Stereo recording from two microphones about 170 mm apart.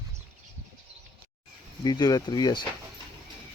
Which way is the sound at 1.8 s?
20° left (ahead or behind).